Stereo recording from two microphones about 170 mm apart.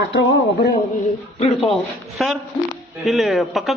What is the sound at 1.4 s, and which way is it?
Speech, 30° left (ahead or behind).